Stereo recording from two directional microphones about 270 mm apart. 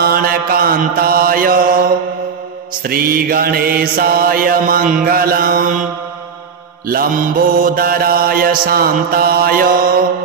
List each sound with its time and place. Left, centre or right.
0.0 s mantra: right
6.9 s mantra: right